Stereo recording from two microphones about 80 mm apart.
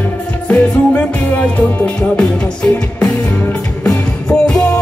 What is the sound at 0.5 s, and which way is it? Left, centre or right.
Music, centre.